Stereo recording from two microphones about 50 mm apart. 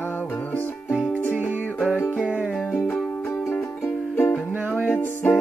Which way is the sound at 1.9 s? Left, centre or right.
Left.